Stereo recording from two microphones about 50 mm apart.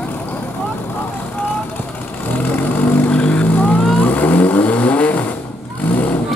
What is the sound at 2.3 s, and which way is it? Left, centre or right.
Vehicle, left.